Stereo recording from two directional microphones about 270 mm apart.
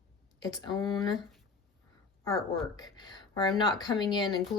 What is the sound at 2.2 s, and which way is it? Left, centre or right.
Speech, centre.